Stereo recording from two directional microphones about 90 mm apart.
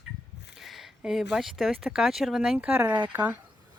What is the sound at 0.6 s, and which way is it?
Speech, 5° right (ahead or behind).